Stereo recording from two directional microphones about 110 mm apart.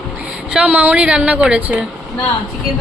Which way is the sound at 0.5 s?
15° right (ahead or behind).